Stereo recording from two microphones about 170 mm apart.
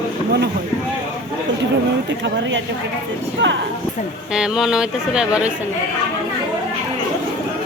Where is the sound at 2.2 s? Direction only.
90° right.